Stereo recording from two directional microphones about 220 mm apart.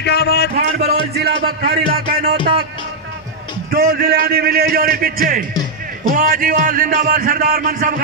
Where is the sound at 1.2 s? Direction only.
45° right (ahead or behind).